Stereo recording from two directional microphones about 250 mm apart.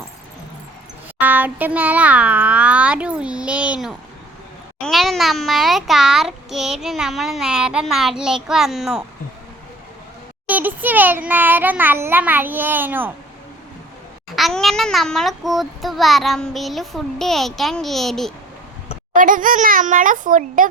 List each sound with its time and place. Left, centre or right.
1.2 s a child's voice: centre
10.4 s a child's voice: centre
14.3 s a child's voice: centre
19.1 s a child's voice: right